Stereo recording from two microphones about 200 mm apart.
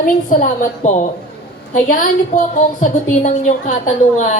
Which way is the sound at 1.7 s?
40° left (ahead or behind).